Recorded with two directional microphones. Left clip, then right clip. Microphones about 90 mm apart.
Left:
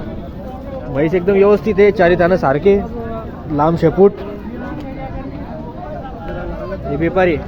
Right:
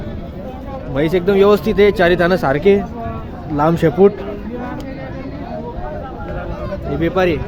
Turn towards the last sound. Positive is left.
turn(degrees=5)  # may be behind; listen again after turning